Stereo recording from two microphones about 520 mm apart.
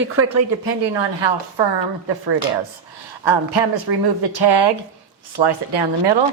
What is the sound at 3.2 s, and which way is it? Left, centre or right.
A woman's voice, right.